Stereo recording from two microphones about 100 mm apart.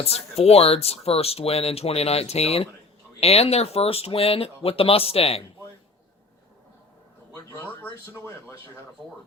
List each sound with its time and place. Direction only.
0.0 s speech: 90° left